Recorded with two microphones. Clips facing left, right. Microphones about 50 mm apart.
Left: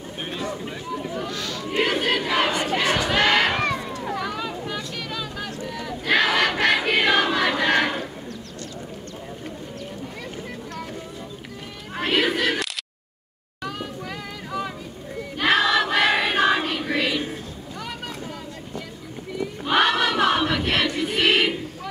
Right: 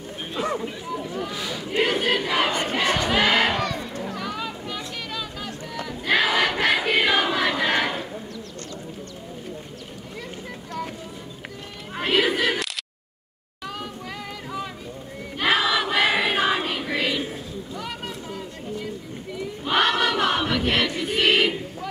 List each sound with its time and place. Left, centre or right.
1.2 s speech: centre
1.8 s crowd: centre
3.5 s a sound: left
4.2 s a sound: centre
4.7 s vehicle: centre
5.9 s battle cry: centre
12.0 s cat: centre
15.3 s choir: centre
19.6 s choir: centre